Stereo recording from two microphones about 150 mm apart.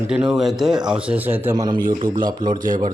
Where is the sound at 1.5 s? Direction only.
25° right (ahead or behind).